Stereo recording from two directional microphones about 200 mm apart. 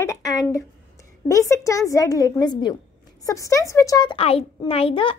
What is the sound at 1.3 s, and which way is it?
A woman's voice, 15° left (ahead or behind).